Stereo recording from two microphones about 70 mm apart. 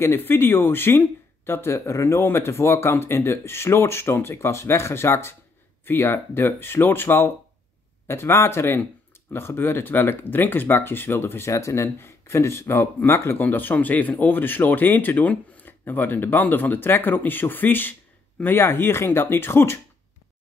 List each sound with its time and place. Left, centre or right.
0.0 s speech: left